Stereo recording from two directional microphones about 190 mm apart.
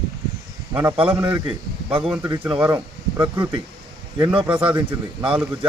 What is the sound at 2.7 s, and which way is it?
Speech, 20° right (ahead or behind).